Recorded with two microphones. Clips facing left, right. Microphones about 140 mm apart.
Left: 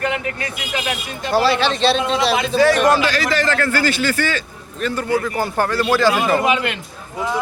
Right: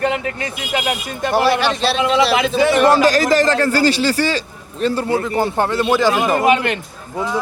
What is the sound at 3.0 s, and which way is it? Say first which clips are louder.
A man's voice: right 6 dB; 40° right (ahead or behind).